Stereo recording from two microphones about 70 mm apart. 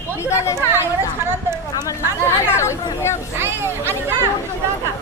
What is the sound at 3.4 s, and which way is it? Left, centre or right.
Speech, right.